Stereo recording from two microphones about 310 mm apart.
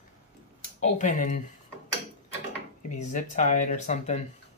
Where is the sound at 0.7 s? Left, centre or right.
Left.